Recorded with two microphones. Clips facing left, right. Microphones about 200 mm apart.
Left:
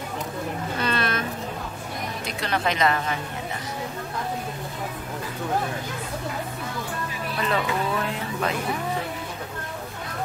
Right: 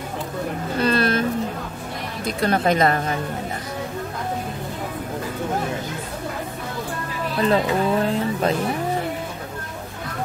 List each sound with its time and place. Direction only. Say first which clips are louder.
0.7 s a sound: right 8 dB; 35° right (ahead or behind)
2.4 s a woman's voice: right 5 dB; 45° right (ahead or behind)
7.3 s speech: right 6 dB; 35° right (ahead or behind)